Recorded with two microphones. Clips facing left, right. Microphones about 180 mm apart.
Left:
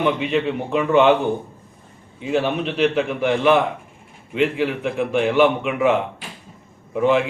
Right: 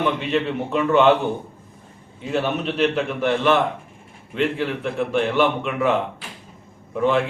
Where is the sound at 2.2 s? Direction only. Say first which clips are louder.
Left 2 dB; 5° left (ahead or behind).